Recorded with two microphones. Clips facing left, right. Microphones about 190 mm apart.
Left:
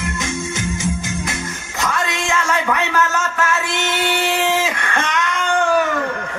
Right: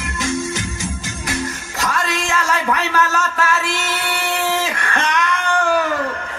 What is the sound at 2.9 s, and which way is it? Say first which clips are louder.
Music: even; 25° left (ahead or behind).